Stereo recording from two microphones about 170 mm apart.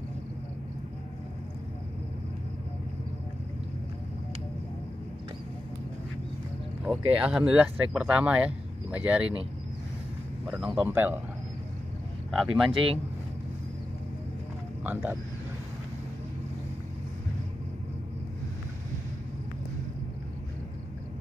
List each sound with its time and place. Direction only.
6.8 s speech: 5° right (ahead or behind)
10.6 s speech: 5° right (ahead or behind)
12.3 s speech: centre (ahead or behind)
12.7 s speech: 35° right (ahead or behind)
14.8 s speech: 10° right (ahead or behind)